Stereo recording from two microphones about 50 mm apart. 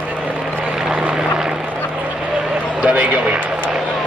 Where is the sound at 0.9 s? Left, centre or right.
Centre.